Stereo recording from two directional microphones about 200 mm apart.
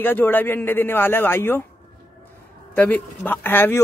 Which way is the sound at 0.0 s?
10° left (ahead or behind).